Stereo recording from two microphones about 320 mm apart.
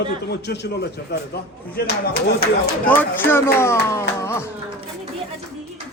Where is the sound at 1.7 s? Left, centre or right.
Left.